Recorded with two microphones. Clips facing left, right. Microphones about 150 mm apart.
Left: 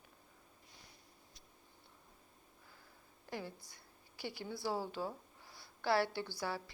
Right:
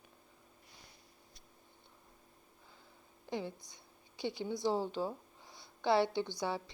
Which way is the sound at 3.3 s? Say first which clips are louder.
Right 5 dB; 20° right (ahead or behind).